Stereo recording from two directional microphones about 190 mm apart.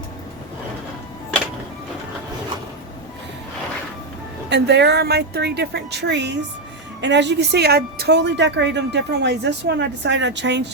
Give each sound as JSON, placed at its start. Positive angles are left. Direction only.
{"t": 4.4, "sound": "speech", "side_deg": -65}